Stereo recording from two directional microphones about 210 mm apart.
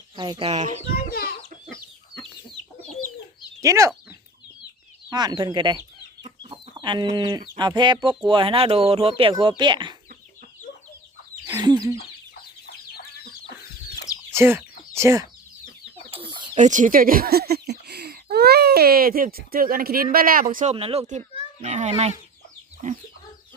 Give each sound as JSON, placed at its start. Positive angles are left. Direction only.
{"t": 0.2, "sound": "speech", "side_deg": -25}
{"t": 0.9, "sound": "chicken", "side_deg": 45}
{"t": 3.6, "sound": "speech", "side_deg": -15}
{"t": 5.1, "sound": "speech", "side_deg": -20}
{"t": 6.2, "sound": "chicken", "side_deg": -20}
{"t": 7.5, "sound": "speech", "side_deg": -20}
{"t": 11.4, "sound": "chicken", "side_deg": -15}
{"t": 14.3, "sound": "a child's voice", "side_deg": -10}